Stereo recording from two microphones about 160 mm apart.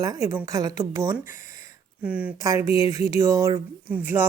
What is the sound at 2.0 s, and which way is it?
Speech, 10° right (ahead or behind).